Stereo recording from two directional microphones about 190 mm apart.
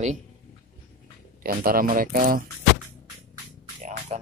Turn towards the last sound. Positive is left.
turn(degrees=-35)  # may be behind; listen again after turning